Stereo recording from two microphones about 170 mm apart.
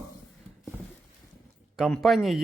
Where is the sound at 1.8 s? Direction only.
Centre (ahead or behind).